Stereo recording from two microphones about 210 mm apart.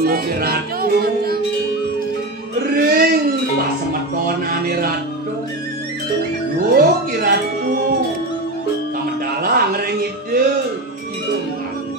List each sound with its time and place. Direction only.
0.0 s music: 45° right (ahead or behind)
2.7 s a sound: 45° right (ahead or behind)
4.5 s music: 45° right (ahead or behind)
6.7 s music: 45° right (ahead or behind)
9.4 s music: 45° right (ahead or behind)